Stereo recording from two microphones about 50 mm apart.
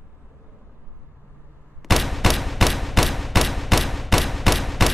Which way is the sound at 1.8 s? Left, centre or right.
Centre.